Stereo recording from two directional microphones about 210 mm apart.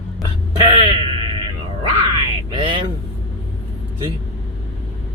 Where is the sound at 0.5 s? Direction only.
20° right (ahead or behind).